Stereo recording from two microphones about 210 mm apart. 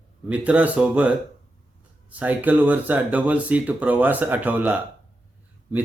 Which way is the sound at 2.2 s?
5° right (ahead or behind).